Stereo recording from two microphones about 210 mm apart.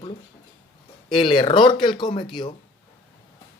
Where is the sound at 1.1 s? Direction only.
25° left (ahead or behind).